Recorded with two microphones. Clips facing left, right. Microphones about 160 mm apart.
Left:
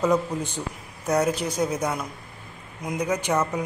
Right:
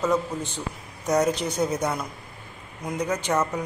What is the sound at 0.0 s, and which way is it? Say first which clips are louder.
Speech: left 2 dB; 15° left (ahead or behind).